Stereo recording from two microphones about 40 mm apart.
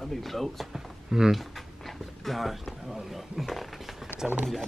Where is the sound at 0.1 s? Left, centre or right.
Centre.